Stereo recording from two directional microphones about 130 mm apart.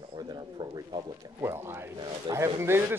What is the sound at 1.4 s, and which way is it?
A man's voice, 20° right (ahead or behind).